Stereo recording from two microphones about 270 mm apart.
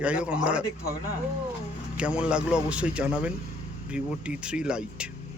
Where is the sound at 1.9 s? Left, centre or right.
Centre.